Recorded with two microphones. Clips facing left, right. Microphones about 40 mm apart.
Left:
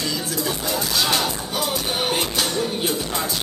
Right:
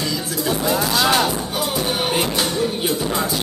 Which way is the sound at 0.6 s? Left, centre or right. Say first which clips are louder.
Right 5 dB; right.